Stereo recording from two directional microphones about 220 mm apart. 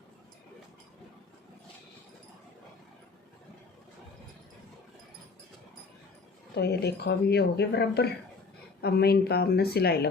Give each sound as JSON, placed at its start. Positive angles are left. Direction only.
{"t": 6.6, "sound": "speech", "side_deg": 45}